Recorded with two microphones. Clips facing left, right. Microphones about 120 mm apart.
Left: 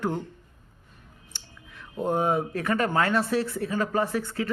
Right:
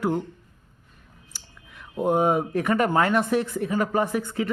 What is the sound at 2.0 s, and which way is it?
Speech, 15° right (ahead or behind).